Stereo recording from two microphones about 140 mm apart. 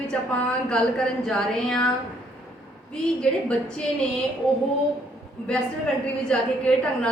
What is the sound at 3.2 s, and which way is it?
Speech, 5° left (ahead or behind).